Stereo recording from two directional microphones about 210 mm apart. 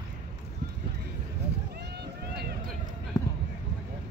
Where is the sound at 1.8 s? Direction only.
50° right (ahead or behind).